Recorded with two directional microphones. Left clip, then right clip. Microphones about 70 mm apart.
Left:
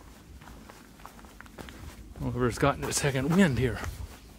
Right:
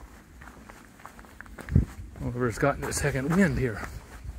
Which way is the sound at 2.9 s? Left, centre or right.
Centre.